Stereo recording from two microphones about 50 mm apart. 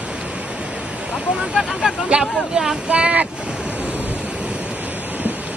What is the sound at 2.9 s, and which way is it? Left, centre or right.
Speech, right.